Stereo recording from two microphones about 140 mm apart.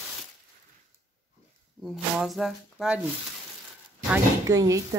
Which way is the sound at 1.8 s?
Centre (ahead or behind).